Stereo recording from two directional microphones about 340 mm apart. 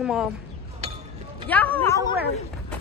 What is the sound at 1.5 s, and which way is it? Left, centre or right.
Speech, centre.